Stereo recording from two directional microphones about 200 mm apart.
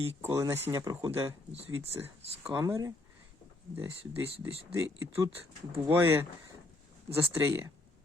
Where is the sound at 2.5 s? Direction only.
15° right (ahead or behind).